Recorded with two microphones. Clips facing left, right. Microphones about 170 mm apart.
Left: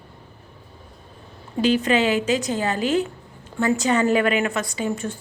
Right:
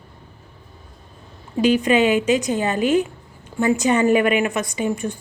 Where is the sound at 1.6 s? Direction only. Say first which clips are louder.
Right 3 dB; 15° right (ahead or behind).